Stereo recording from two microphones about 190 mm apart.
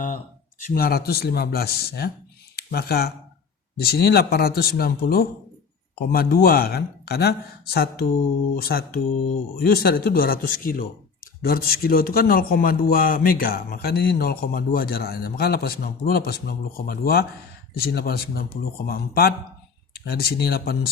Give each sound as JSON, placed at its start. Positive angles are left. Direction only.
{"t": 0.7, "sound": "a man's voice", "side_deg": 50}